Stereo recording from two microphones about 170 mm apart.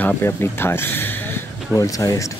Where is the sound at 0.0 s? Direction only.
15° left (ahead or behind).